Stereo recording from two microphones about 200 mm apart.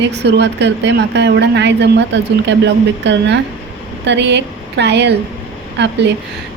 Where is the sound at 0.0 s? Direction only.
55° right (ahead or behind).